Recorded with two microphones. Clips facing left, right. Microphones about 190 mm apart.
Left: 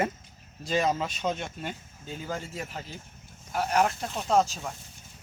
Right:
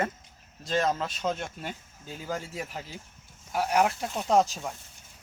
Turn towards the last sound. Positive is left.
turn(degrees=-15)  # may be behind; listen again after turning